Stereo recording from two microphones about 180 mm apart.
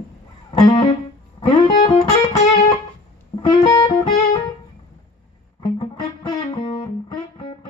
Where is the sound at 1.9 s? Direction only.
40° left (ahead or behind).